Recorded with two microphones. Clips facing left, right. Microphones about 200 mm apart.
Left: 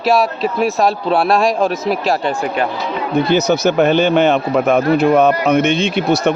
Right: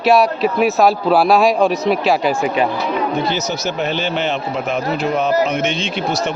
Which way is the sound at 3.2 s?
60° left (ahead or behind).